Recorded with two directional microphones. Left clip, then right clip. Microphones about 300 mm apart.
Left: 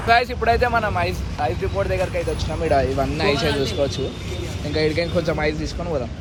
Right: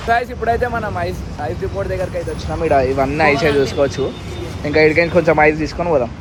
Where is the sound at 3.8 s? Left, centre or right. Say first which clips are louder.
Right 6 dB; right.